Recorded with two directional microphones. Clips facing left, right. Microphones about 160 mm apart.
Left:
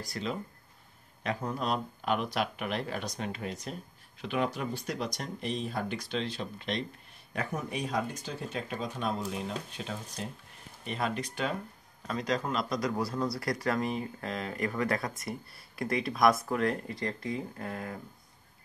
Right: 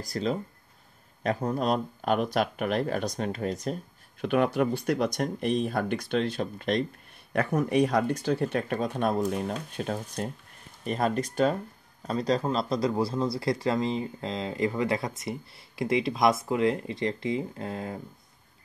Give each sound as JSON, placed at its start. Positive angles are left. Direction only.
{"t": 0.0, "sound": "speech", "side_deg": -40}
{"t": 4.2, "sound": "speech", "side_deg": -55}
{"t": 7.3, "sound": "speech", "side_deg": -65}